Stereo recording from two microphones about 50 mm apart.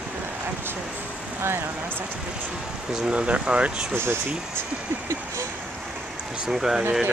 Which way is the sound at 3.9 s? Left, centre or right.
Right.